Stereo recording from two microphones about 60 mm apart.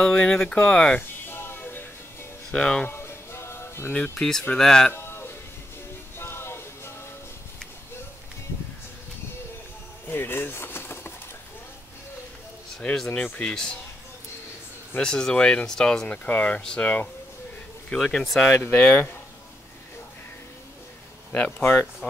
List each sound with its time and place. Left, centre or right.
0.0 s speech: centre
1.2 s a sound: left
2.5 s speech: centre
2.9 s music: left
3.9 s speech: left
4.2 s speech: centre
4.9 s music: left
10.0 s pigeon: left
12.9 s speech: centre
15.0 s speech: centre
16.3 s speech: left
17.8 s speech: centre
18.5 s speech: left